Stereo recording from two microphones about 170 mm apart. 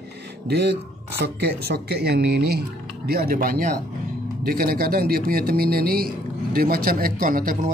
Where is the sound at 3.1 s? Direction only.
60° right (ahead or behind).